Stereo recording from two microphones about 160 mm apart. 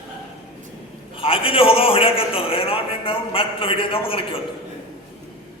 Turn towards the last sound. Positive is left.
turn(degrees=35)  # may be behind; listen again after turning